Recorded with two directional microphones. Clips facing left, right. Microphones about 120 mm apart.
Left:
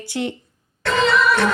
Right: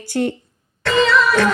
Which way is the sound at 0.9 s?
90° right.